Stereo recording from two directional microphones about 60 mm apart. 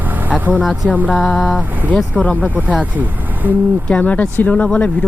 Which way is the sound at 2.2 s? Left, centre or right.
Left.